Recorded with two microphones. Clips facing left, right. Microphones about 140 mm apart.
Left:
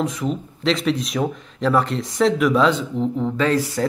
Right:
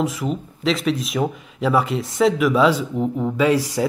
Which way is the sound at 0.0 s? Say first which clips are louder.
Even; 5° right (ahead or behind).